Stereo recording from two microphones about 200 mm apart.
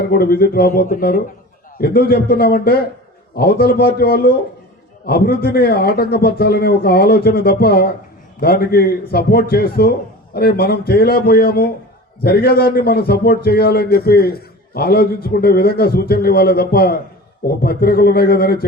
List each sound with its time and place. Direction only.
0.1 s a man's voice: 50° left (ahead or behind)